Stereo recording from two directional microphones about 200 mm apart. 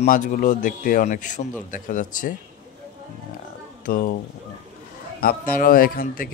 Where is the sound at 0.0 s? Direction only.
40° left (ahead or behind).